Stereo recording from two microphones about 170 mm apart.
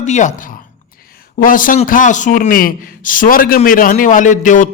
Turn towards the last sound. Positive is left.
turn(degrees=50)  # may be behind; listen again after turning